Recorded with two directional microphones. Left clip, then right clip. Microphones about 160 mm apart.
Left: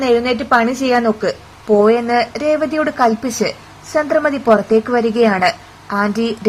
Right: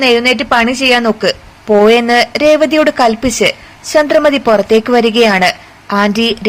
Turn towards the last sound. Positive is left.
turn(degrees=-15)  # may be behind; listen again after turning